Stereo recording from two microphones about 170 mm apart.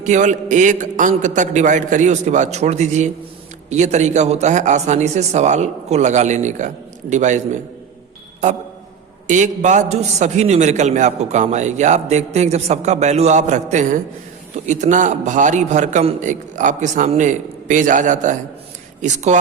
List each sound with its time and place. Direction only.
0.0 s a man's voice: 45° right (ahead or behind)
9.2 s a man's voice: 45° right (ahead or behind)